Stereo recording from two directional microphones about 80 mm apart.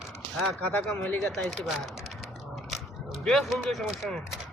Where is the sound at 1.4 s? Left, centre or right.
Centre.